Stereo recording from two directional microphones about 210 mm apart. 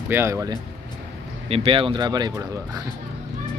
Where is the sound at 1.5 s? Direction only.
25° right (ahead or behind).